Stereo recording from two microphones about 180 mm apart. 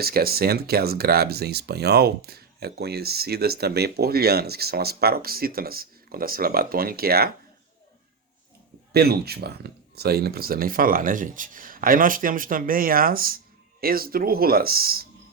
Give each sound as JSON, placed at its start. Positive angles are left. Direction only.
{"t": 0.0, "sound": "speech", "side_deg": -60}
{"t": 8.9, "sound": "speech", "side_deg": -60}